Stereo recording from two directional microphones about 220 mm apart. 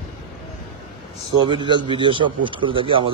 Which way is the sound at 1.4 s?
20° right (ahead or behind).